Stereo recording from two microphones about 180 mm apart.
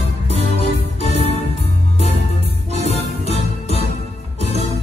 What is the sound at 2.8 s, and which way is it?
Music, 35° left (ahead or behind).